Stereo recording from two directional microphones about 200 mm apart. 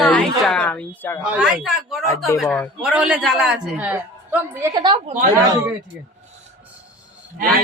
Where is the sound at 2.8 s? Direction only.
5° right (ahead or behind); by 5.1 s 25° right (ahead or behind).